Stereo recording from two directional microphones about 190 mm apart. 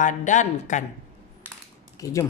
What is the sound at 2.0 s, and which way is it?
Speech, 15° left (ahead or behind).